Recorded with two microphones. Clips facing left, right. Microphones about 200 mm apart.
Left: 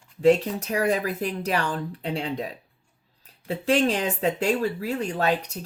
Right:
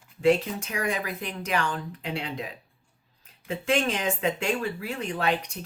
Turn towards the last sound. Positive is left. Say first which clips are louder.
# left 3 dB
turn(degrees=40)  # may be behind; listen again after turning